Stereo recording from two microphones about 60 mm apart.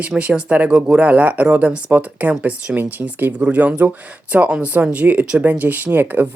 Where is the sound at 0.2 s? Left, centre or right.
Centre.